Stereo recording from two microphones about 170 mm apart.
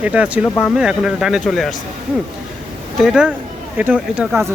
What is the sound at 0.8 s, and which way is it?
Speech, 5° right (ahead or behind).